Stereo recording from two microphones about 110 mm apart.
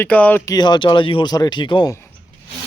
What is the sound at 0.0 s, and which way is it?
Speech, 15° left (ahead or behind).